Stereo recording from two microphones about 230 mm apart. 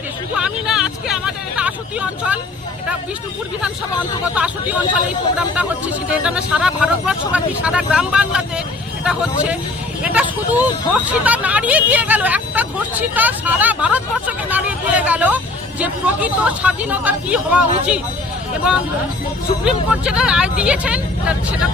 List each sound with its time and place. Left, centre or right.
0.3 s vehicle: centre
4.4 s speech: centre